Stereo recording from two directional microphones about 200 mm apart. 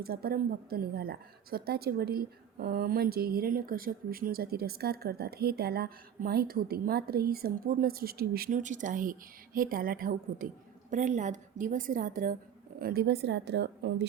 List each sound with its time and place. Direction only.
0.0 s a woman's voice: 50° right (ahead or behind)